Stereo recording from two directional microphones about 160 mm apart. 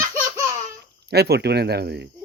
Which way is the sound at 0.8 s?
90° right.